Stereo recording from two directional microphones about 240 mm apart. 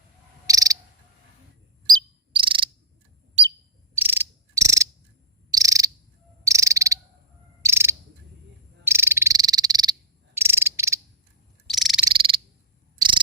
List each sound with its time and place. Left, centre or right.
0.4 s cricket: centre
1.9 s cricket: centre
3.9 s insect: centre
5.5 s frog: centre
6.4 s cricket: centre
8.8 s frog: centre
10.3 s cricket: centre
11.7 s frog: centre
12.0 s frog: right
13.0 s cricket: centre